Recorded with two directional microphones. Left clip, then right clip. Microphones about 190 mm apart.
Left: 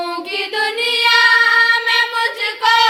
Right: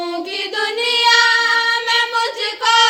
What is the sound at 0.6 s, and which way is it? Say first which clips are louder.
Child singing: right 1 dB; 50° left (ahead or behind).